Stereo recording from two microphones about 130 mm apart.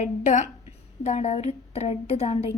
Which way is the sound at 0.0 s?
65° left (ahead or behind).